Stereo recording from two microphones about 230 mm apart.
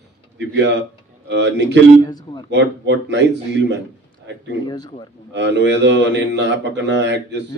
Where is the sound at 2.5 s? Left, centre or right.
Right.